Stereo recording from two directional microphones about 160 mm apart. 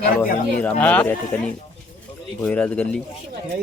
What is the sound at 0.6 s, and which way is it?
Speech, 10° left (ahead or behind).